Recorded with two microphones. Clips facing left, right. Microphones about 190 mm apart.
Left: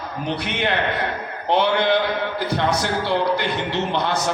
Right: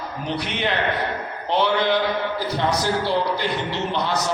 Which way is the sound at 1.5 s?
55° left (ahead or behind).